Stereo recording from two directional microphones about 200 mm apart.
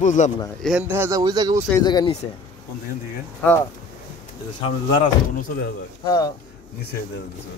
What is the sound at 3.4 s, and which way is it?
Speech, 10° left (ahead or behind).